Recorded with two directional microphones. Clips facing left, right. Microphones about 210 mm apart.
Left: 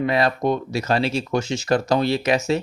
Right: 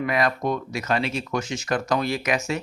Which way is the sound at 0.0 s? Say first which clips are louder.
Left 3 dB; 30° left (ahead or behind).